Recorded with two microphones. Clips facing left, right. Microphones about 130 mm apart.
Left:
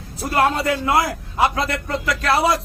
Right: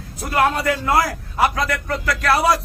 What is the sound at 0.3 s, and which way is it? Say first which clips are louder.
A man's voice: even; 30° left (ahead or behind).